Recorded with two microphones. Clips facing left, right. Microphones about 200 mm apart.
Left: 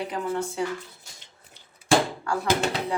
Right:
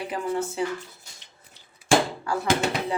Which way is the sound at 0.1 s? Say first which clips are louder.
Right 1 dB; 5° right (ahead or behind).